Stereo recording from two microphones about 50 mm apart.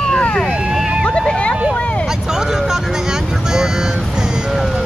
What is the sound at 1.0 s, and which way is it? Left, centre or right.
Vehicle, centre.